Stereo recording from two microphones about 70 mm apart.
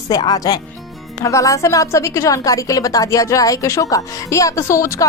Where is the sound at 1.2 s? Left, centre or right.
Left.